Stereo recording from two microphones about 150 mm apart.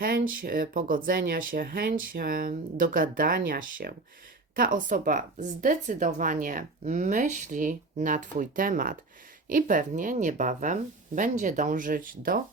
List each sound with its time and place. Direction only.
0.0 s speech: 75° right (ahead or behind)